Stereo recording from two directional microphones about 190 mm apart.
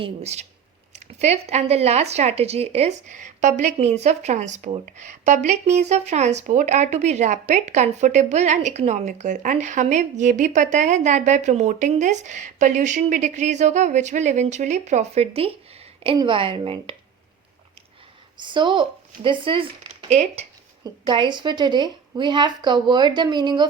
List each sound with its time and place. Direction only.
0.0 s a woman's voice: 35° right (ahead or behind)
18.3 s a woman's voice: 25° right (ahead or behind)